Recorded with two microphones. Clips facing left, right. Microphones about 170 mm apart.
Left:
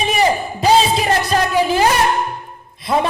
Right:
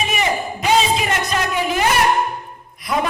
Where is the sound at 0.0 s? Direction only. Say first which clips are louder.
Left 4 dB; 35° left (ahead or behind).